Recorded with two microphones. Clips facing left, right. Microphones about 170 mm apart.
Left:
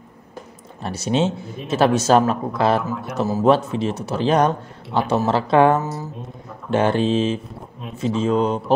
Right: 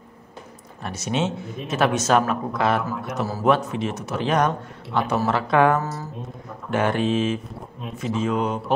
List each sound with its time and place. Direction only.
0.8 s speech: 30° left (ahead or behind)
2.8 s speech: centre (ahead or behind)
3.4 s speech: 30° left (ahead or behind)
5.9 s speech: centre (ahead or behind)
6.7 s speech: 30° left (ahead or behind)